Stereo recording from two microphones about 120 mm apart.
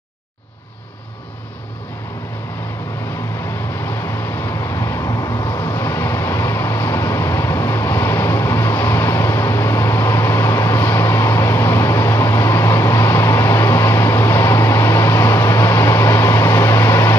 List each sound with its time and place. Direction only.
3.8 s vehicle: 20° left (ahead or behind)